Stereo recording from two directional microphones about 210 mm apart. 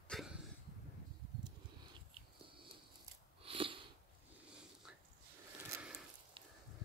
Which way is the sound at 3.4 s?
25° right (ahead or behind).